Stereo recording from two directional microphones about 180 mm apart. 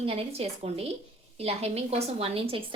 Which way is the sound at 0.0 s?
35° right (ahead or behind).